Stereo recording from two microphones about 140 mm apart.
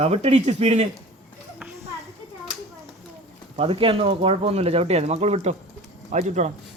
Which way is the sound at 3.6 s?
45° right (ahead or behind).